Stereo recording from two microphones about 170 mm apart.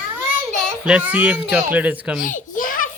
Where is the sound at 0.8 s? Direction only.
5° right (ahead or behind).